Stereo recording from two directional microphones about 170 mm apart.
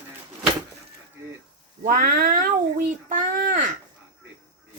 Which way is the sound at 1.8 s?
55° right (ahead or behind).